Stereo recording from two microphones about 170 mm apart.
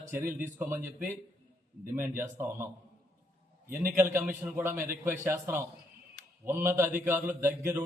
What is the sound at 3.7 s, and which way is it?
A man's voice, 15° right (ahead or behind).